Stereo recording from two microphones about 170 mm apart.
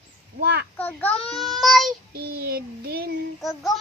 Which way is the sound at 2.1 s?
65° right (ahead or behind).